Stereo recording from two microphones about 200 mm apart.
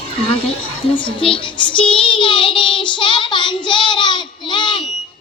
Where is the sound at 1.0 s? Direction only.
25° left (ahead or behind).